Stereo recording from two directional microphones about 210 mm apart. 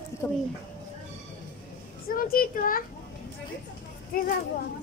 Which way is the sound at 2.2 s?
45° left (ahead or behind).